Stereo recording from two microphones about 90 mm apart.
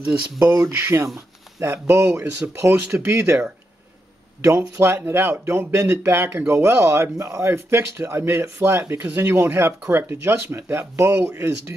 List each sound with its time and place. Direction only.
0.0 s speech: 20° right (ahead or behind)
4.4 s speech: 30° right (ahead or behind)